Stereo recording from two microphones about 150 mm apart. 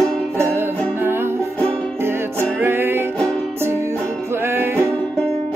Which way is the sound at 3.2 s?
5° left (ahead or behind).